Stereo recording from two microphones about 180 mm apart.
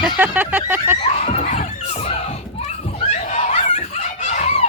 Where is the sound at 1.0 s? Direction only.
35° left (ahead or behind).